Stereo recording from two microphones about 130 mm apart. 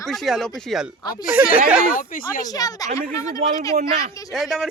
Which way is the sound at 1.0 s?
30° left (ahead or behind).